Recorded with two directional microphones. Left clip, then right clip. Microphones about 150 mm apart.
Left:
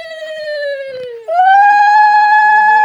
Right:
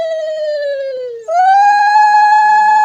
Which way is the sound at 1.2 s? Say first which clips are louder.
Left 1 dB; 25° left (ahead or behind).